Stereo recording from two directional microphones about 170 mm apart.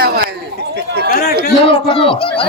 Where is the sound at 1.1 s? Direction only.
65° left (ahead or behind).